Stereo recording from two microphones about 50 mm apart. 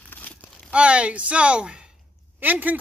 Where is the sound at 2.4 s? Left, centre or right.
Right.